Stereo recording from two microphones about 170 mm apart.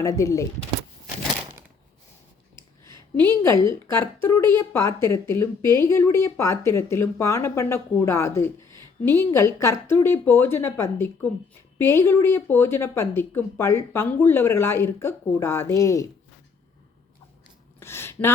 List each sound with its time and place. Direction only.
0.0 s speech: 20° left (ahead or behind)
3.4 s speech: 15° left (ahead or behind)
17.7 s a sound: 15° left (ahead or behind)